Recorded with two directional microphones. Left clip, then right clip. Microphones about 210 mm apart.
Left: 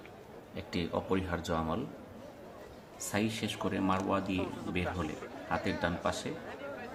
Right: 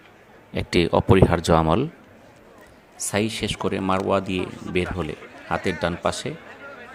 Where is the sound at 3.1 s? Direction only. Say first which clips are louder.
Right 10 dB; 45° right (ahead or behind).